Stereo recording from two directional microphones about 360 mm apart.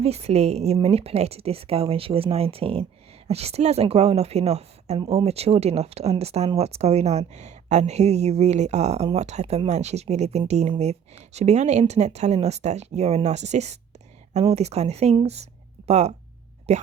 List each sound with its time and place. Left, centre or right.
0.0 s a woman's voice: centre